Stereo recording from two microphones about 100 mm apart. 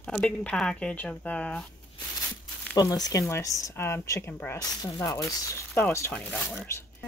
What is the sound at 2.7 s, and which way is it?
Speech, 40° left (ahead or behind).